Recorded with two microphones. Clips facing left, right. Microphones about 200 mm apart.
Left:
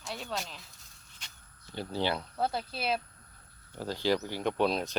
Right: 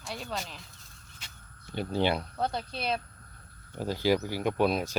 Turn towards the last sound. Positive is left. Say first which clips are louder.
# right 2 dB
turn(degrees=-5)  # may be behind; listen again after turning